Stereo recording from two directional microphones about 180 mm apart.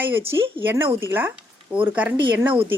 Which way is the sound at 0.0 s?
10° right (ahead or behind).